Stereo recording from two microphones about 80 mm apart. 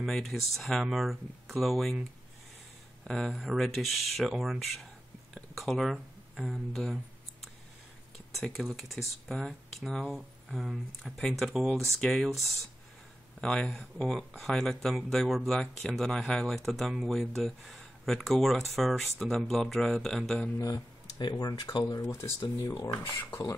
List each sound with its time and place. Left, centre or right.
0.0 s speech: centre
3.0 s speech: centre
8.5 s speech: centre
20.5 s speech: left
21.2 s speech: left
21.8 s speech: left